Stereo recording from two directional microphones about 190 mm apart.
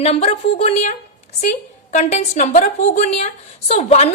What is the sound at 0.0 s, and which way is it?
A woman's voice, 35° left (ahead or behind).